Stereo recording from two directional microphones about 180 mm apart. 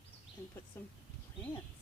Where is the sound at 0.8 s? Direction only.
10° left (ahead or behind).